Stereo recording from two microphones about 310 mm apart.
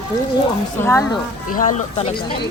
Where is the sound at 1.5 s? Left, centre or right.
Left.